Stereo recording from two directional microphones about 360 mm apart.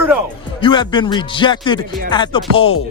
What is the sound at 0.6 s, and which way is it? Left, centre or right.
Speech, centre.